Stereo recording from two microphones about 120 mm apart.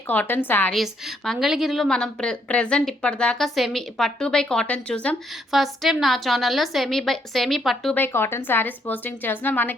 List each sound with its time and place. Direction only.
0.1 s speech: 15° left (ahead or behind)
0.7 s a woman's voice: centre (ahead or behind)
5.5 s a woman's voice: centre (ahead or behind)
7.9 s speech: 20° left (ahead or behind)